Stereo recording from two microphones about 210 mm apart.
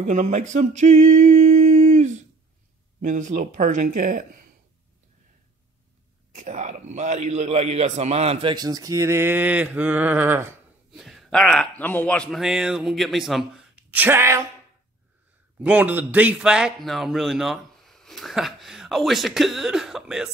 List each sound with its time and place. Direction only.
0.0 s a sound: 35° right (ahead or behind)
3.0 s speech: 35° right (ahead or behind)
6.3 s a man's voice: 35° right (ahead or behind); by 14.4 s 10° right (ahead or behind)
15.6 s speech: 5° right (ahead or behind)